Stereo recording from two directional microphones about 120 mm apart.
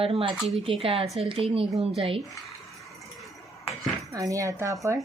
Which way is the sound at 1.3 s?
50° right (ahead or behind).